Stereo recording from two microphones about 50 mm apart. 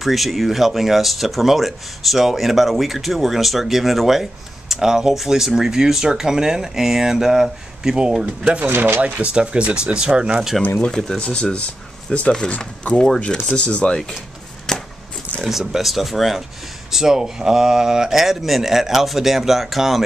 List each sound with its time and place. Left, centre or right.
0.0 s speech: centre
8.6 s speech: right
9.0 s speech: right
11.1 s speech: left
12.9 s speech: centre
13.6 s speech: left
14.7 s chop: centre
15.4 s speech: centre